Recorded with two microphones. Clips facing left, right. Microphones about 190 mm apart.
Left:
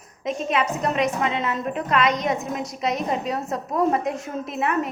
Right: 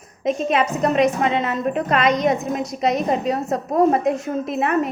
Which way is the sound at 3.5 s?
45° right (ahead or behind).